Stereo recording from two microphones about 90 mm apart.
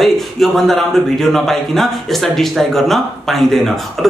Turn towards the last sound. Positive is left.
turn(degrees=5)  # may be behind; listen again after turning